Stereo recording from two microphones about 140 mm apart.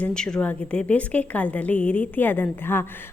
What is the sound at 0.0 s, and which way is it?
A woman's voice, 5° left (ahead or behind).